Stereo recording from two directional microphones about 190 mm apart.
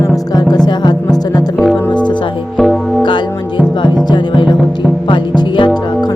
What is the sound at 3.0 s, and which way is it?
Music, 25° left (ahead or behind).